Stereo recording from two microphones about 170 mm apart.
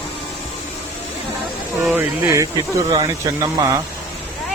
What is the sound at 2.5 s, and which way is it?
Speech, 20° right (ahead or behind).